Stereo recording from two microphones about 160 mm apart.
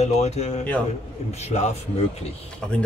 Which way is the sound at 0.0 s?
45° left (ahead or behind).